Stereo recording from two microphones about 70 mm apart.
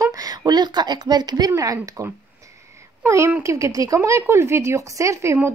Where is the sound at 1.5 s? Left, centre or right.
Right.